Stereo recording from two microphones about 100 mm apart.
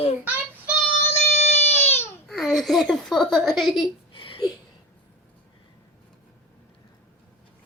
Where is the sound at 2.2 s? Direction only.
Centre (ahead or behind).